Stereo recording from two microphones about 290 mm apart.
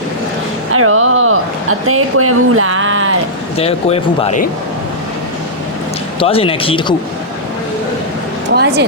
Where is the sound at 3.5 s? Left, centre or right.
Centre.